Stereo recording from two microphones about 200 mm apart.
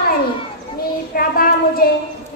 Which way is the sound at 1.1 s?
45° left (ahead or behind).